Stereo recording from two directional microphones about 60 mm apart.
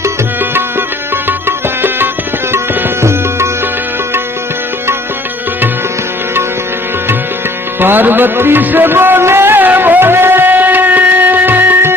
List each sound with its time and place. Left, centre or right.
0.5 s music: right
2.5 s tabla: right
3.0 s music: right
7.8 s music: right